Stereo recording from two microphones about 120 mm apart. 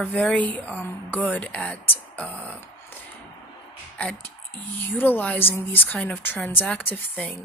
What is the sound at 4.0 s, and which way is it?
Speech, 10° left (ahead or behind).